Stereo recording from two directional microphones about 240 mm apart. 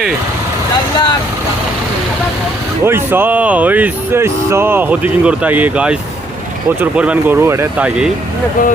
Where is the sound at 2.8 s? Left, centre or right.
Centre.